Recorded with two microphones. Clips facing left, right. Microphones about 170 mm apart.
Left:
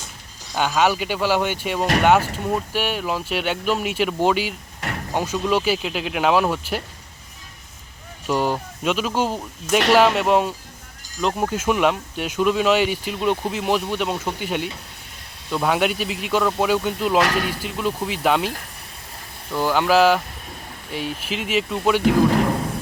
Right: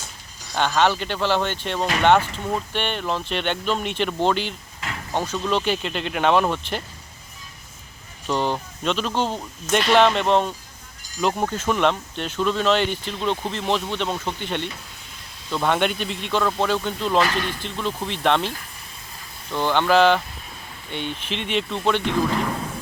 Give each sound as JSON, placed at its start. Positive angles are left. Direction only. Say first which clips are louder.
{"t": 0.5, "sound": "speech", "louder": "left 1 dB", "side_deg": 5}
{"t": 4.8, "sound": "a sound", "louder": "left 4 dB", "side_deg": 55}
{"t": 5.1, "sound": "speech", "louder": "left 2 dB", "side_deg": 10}
{"t": 8.3, "sound": "speech", "louder": "left 2 dB", "side_deg": 10}